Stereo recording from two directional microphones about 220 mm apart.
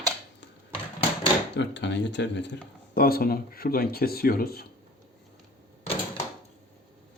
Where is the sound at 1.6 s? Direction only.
50° left (ahead or behind).